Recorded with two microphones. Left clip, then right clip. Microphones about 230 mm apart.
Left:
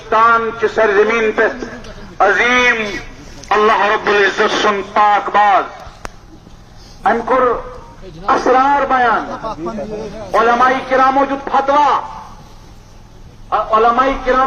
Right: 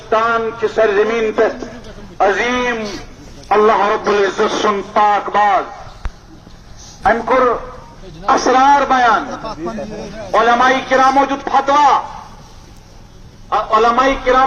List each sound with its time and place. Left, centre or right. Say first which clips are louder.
0.1 s a man's voice: left 3 dB; left
2.1 s a man's voice: left 3 dB; centre
3.5 s speech: even; right
7.0 s speech: even; right
10.3 s speech: even; right
13.5 s speech: left 1 dB; right